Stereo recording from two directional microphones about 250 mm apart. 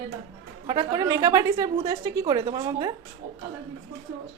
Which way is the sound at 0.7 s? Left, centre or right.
Centre.